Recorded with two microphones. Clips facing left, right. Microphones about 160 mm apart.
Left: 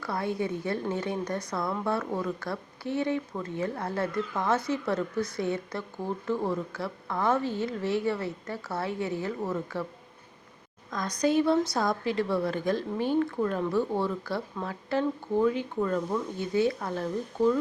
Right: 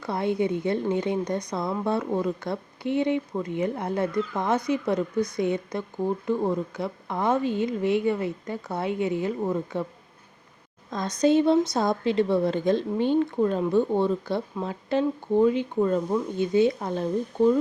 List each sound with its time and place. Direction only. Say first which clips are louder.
0.0 s a woman's voice: right 5 dB; 20° right (ahead or behind)
10.9 s a woman's voice: right 4 dB; 25° right (ahead or behind)